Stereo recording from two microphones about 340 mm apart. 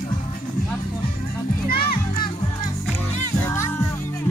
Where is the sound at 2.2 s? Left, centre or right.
Centre.